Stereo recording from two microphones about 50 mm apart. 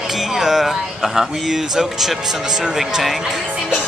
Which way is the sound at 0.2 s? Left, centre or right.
Centre.